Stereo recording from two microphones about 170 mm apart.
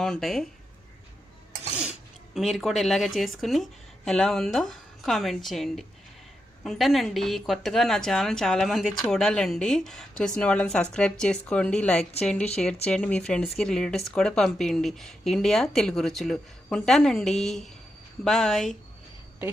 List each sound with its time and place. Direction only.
0.0 s speech: centre (ahead or behind)
2.3 s speech: centre (ahead or behind)